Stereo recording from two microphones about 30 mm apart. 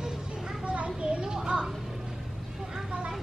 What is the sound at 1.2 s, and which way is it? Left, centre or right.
Children playing, right.